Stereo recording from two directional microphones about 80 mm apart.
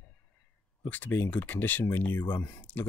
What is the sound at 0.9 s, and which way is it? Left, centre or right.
Speech, left.